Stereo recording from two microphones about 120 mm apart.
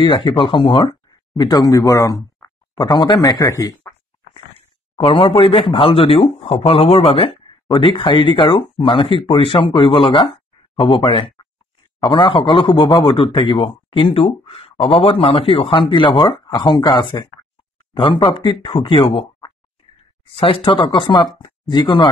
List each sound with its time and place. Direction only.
0.0 s speech: 40° left (ahead or behind)
4.3 s speech: 50° left (ahead or behind)
7.7 s speech: 40° left (ahead or behind)